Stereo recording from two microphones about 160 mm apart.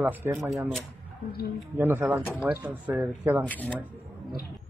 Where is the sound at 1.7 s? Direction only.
10° right (ahead or behind).